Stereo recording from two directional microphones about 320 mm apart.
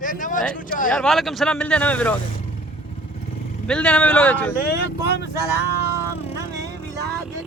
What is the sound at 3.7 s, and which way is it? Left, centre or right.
Speech, centre.